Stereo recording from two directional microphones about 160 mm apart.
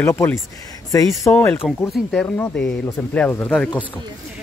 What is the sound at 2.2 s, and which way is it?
Speech, 15° left (ahead or behind).